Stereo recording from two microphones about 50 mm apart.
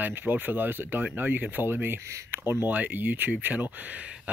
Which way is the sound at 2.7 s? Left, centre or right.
Right.